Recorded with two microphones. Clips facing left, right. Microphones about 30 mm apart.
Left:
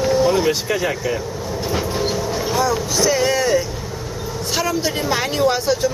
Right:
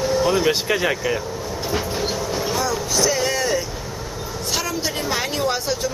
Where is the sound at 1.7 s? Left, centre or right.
Centre.